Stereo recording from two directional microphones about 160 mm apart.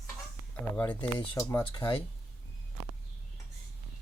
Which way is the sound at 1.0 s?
30° left (ahead or behind).